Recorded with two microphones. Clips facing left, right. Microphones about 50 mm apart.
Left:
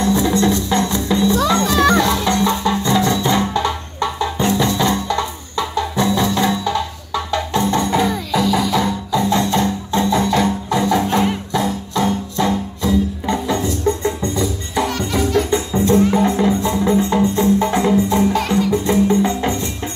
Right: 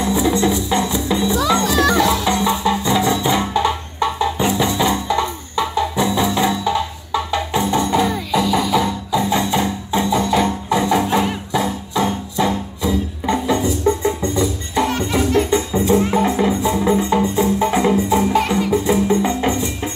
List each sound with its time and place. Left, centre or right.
0.0 s music: centre
14.2 s music: right
15.7 s music: centre